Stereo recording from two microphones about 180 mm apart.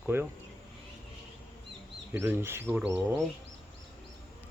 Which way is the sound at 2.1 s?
10° right (ahead or behind).